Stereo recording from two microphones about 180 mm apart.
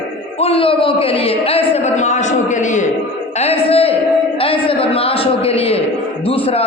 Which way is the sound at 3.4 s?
35° left (ahead or behind).